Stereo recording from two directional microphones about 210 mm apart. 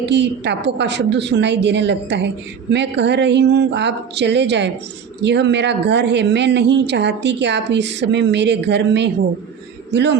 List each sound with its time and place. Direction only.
0.0 s a woman's voice: 55° right (ahead or behind)